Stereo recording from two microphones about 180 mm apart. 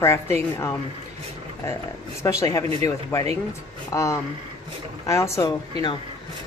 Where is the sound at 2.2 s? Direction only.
20° left (ahead or behind).